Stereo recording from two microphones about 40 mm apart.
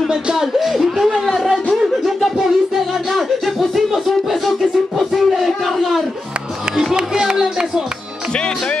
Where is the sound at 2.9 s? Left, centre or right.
Centre.